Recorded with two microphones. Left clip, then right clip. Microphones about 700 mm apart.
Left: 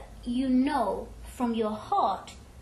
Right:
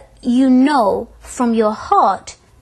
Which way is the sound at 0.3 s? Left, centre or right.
Right.